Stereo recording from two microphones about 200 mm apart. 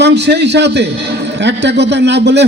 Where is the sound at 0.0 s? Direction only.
55° right (ahead or behind).